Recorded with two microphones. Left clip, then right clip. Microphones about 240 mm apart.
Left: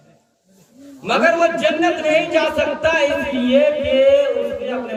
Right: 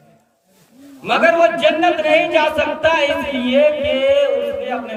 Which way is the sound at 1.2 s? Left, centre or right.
Right.